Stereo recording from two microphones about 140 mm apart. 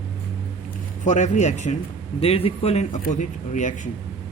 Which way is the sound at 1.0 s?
60° left (ahead or behind).